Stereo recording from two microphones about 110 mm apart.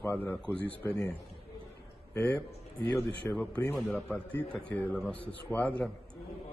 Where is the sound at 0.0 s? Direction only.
15° left (ahead or behind).